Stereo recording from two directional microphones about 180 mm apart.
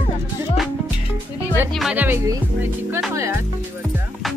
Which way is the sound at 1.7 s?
5° right (ahead or behind).